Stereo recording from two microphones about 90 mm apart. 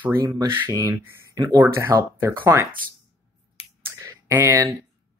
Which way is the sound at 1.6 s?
25° right (ahead or behind).